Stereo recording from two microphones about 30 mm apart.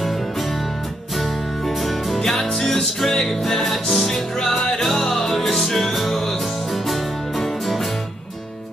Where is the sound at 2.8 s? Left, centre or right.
Centre.